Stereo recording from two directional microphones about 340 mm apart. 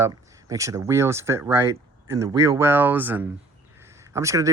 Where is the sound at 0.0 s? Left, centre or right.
Centre.